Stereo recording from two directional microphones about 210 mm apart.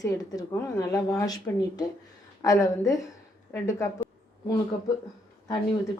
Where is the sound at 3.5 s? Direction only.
15° left (ahead or behind).